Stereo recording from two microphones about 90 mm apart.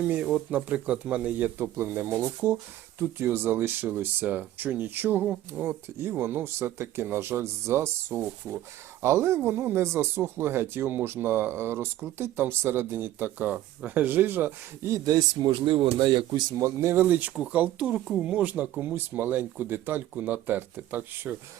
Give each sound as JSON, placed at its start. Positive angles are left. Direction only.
{"t": 0.5, "sound": "speech", "side_deg": -15}
{"t": 15.6, "sound": "speech", "side_deg": -75}
{"t": 17.0, "sound": "speech", "side_deg": -20}